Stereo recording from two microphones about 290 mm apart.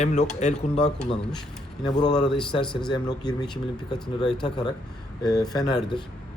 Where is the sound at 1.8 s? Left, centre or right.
Centre.